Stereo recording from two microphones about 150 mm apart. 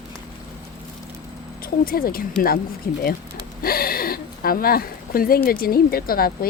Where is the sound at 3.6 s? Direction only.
80° left.